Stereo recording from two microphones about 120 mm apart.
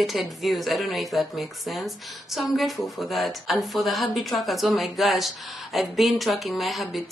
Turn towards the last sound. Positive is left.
turn(degrees=0)  # may be behind; listen again after turning